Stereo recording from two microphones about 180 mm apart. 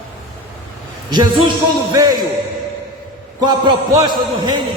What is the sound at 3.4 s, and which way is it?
A man's voice, 25° right (ahead or behind).